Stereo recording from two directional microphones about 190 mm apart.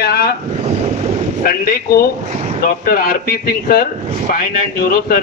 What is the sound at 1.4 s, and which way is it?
Speech, 50° left (ahead or behind).